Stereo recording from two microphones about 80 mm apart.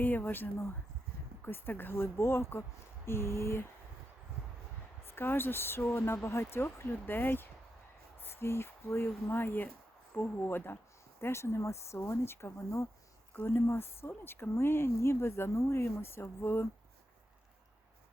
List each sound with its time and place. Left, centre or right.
0.0 s speech: left
5.0 s speech: left